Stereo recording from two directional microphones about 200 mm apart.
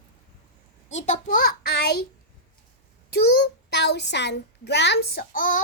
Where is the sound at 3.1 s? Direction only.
55° left (ahead or behind).